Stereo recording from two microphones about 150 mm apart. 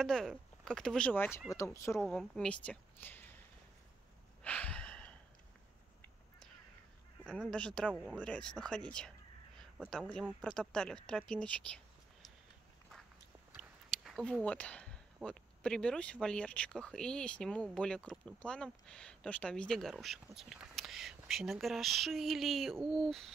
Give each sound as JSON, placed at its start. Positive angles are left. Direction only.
{"t": 0.0, "sound": "speech", "side_deg": 0}
{"t": 2.0, "sound": "a woman's voice", "side_deg": 0}
{"t": 4.4, "sound": "a sound", "side_deg": 10}
{"t": 7.2, "sound": "speech", "side_deg": 5}
{"t": 13.6, "sound": "a sound", "side_deg": 0}
{"t": 15.2, "sound": "speech", "side_deg": 5}